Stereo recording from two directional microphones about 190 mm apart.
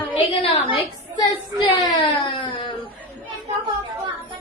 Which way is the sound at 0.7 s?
25° left (ahead or behind).